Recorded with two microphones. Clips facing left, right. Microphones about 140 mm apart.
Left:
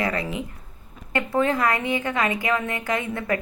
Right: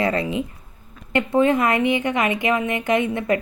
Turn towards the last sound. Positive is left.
turn(degrees=-20)  # may be behind; listen again after turning